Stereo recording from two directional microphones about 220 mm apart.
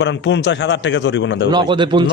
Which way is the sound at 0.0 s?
55° left (ahead or behind).